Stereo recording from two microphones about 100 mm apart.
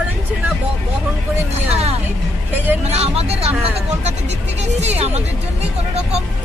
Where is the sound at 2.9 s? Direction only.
90° right.